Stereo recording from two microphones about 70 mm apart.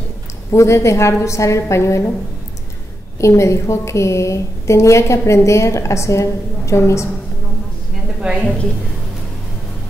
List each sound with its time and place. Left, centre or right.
0.5 s a woman's voice: left
3.2 s a woman's voice: left
8.2 s a woman's voice: centre